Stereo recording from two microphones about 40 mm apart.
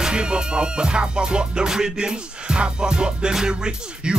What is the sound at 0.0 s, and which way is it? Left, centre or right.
Music, right.